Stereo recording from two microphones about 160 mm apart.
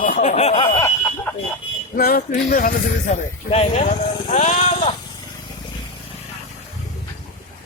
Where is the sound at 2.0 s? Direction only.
65° left (ahead or behind).